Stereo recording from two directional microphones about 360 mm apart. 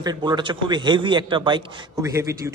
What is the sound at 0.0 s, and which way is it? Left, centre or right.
A man's voice, centre.